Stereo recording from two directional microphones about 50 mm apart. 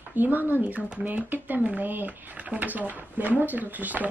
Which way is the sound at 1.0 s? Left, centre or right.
Right.